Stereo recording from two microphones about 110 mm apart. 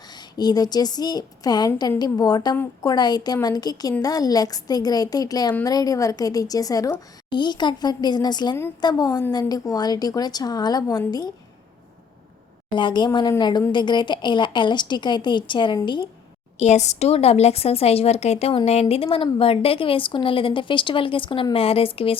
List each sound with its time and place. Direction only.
0.1 s a woman's voice: 40° left (ahead or behind)
12.7 s a woman's voice: 45° left (ahead or behind)
16.6 s a woman's voice: 90° left; by 22.2 s 60° left (ahead or behind)